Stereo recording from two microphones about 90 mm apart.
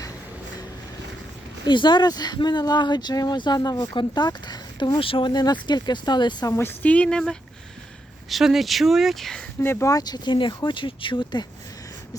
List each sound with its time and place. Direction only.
1.6 s speech: 60° left (ahead or behind)
4.9 s speech: 80° left
5.3 s speech: 50° left (ahead or behind)
6.6 s speech: 20° left (ahead or behind)
8.3 s speech: 5° right (ahead or behind)
9.6 s speech: 25° left (ahead or behind)
9.9 s speech: 50° left (ahead or behind)